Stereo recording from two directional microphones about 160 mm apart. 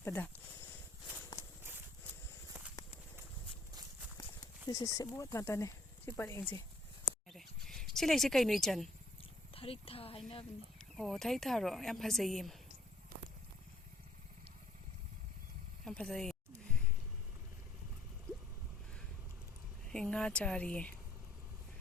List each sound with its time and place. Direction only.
0.0 s speech: 15° left (ahead or behind)
4.7 s speech: 25° left (ahead or behind)
7.3 s a sound: centre (ahead or behind)
9.6 s speech: 35° left (ahead or behind)
10.8 s speech: centre (ahead or behind)
15.8 s speech: 5° left (ahead or behind)
19.9 s speech: 5° left (ahead or behind)